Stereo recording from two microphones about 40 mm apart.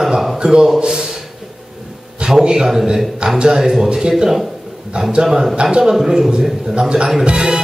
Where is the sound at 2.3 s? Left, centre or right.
Centre.